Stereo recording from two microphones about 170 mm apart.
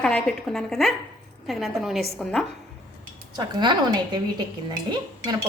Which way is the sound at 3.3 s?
25° right (ahead or behind).